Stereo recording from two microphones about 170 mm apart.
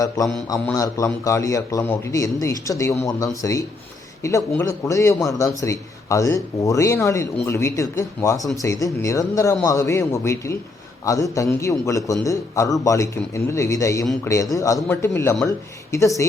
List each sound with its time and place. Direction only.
0.4 s a man's voice: 20° left (ahead or behind)